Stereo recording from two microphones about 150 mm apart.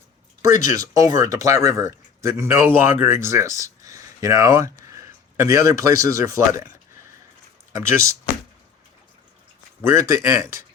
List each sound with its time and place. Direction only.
0.4 s speech: 20° right (ahead or behind)
9.8 s speech: 20° right (ahead or behind)